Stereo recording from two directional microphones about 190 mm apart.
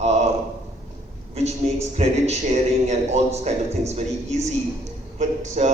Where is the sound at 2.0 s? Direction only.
35° right (ahead or behind).